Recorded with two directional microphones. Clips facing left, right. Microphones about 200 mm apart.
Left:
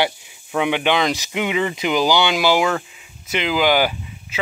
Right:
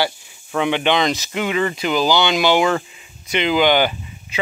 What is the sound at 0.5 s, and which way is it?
Speech, 10° left (ahead or behind).